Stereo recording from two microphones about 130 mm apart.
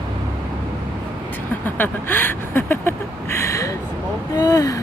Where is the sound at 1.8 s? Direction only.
15° left (ahead or behind).